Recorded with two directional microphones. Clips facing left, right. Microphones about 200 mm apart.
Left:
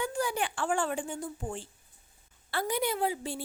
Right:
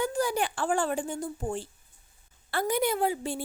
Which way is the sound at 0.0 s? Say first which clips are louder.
Right 4 dB; 40° right (ahead or behind).